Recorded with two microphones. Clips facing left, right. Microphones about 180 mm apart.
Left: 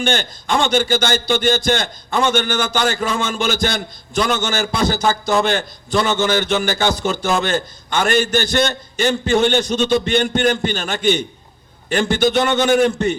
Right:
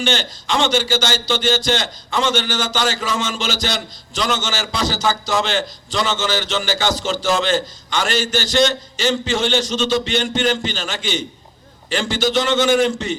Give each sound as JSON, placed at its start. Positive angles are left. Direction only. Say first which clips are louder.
{"t": 0.0, "sound": "a man's voice", "louder": "left 1 dB", "side_deg": 55}